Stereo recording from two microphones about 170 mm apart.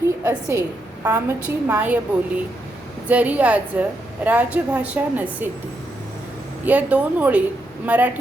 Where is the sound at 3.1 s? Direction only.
10° right (ahead or behind).